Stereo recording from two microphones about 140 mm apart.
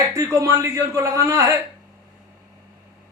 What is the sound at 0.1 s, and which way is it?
A man's voice, 20° right (ahead or behind).